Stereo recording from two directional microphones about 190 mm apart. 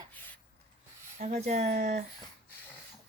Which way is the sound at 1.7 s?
60° right (ahead or behind).